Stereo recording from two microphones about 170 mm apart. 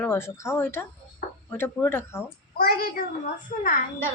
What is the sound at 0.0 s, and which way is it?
A woman's voice, 15° left (ahead or behind).